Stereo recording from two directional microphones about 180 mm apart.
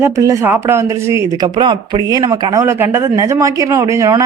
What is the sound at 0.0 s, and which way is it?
Speech, 15° right (ahead or behind).